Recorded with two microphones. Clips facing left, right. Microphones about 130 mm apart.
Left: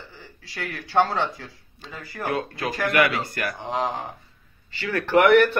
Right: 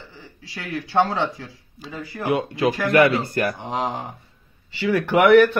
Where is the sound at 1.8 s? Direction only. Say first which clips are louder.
Right 4 dB; 5° right (ahead or behind).